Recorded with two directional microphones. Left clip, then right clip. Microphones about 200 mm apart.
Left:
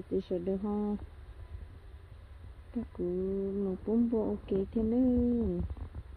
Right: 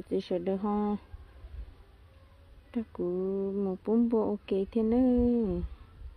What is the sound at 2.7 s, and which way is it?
Speech, 25° right (ahead or behind).